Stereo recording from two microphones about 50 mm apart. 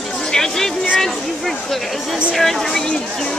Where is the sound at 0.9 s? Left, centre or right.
Centre.